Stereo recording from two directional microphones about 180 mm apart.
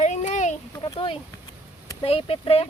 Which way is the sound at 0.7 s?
25° left (ahead or behind).